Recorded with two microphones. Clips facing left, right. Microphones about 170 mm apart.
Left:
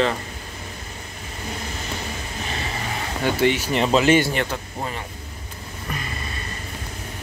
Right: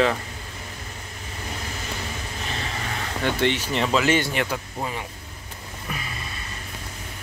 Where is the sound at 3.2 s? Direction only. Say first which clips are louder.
Left 3 dB; 10° left (ahead or behind).